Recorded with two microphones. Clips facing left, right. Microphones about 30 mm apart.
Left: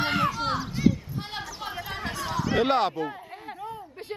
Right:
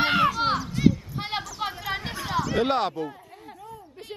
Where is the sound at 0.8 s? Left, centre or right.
Centre.